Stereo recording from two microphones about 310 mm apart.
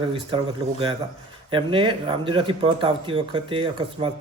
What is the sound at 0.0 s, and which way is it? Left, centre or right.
Speech, centre.